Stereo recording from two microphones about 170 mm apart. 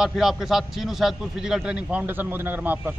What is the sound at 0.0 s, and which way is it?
A man's voice, centre (ahead or behind).